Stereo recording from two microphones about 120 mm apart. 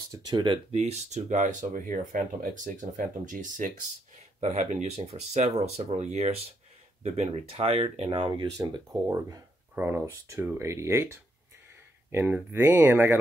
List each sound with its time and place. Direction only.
0.1 s speech: 35° right (ahead or behind)
0.7 s speech: 60° right (ahead or behind); by 3.7 s 90° right
4.4 s speech: 75° right (ahead or behind); by 8.6 s 40° right (ahead or behind)
9.0 s speech: 25° right (ahead or behind)